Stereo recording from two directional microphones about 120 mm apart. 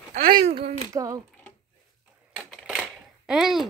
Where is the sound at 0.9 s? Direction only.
40° right (ahead or behind).